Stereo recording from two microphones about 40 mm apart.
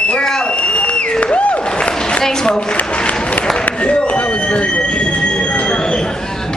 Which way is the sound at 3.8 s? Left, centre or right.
Left.